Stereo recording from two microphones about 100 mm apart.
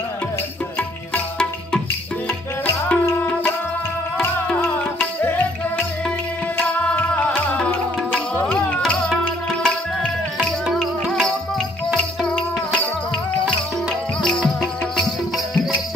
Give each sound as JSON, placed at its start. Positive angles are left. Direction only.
{"t": 0.7, "sound": "music", "side_deg": 15}
{"t": 5.2, "sound": "music", "side_deg": 20}
{"t": 6.9, "sound": "music", "side_deg": 15}
{"t": 14.2, "sound": "music", "side_deg": 5}